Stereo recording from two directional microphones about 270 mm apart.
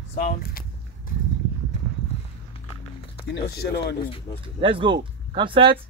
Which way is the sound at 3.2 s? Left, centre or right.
Left.